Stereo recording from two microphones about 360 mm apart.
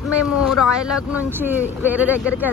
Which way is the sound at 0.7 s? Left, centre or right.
Centre.